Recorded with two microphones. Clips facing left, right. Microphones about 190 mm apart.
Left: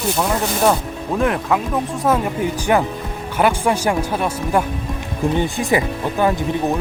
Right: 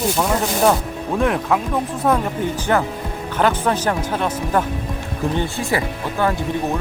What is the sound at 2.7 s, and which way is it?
Speech, 10° left (ahead or behind).